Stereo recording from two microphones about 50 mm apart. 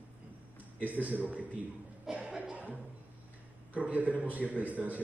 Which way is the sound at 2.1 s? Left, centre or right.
Centre.